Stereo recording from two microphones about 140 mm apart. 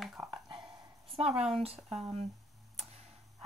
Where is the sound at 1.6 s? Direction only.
45° right (ahead or behind).